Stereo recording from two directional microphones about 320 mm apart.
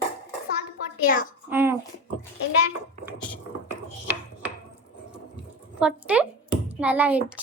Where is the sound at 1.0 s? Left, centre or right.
Left.